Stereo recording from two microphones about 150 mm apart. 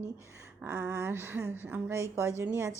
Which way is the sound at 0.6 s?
10° right (ahead or behind).